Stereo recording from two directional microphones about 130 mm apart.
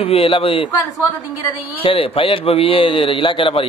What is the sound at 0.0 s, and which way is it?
Speech, 45° left (ahead or behind).